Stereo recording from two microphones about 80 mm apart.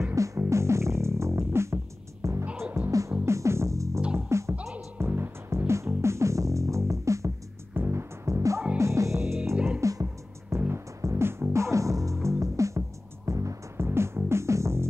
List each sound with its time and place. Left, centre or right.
0.1 s music: right